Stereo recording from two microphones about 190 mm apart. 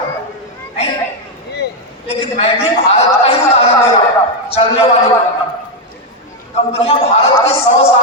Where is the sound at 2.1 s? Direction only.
30° left (ahead or behind).